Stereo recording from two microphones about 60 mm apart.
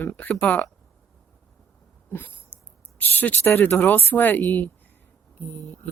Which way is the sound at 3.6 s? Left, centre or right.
Left.